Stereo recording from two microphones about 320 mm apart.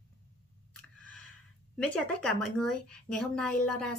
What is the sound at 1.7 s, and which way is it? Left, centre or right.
A woman's voice, centre.